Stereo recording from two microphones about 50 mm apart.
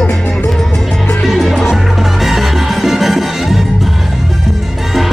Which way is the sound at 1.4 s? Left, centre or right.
Centre.